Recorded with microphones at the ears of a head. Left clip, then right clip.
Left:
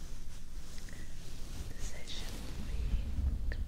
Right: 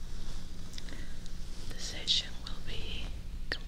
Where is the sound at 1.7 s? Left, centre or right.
Right.